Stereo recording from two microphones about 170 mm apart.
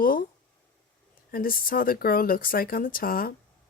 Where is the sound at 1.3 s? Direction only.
55° left (ahead or behind).